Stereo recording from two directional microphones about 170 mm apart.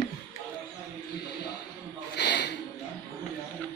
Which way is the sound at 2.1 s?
85° left.